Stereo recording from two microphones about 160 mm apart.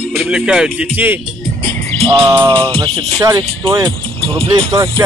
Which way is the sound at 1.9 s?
35° right (ahead or behind).